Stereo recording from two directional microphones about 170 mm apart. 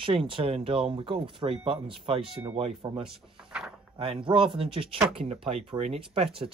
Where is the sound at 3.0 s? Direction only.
5° right (ahead or behind).